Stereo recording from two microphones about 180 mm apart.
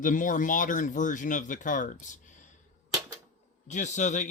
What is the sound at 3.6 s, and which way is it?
Speech, 40° left (ahead or behind).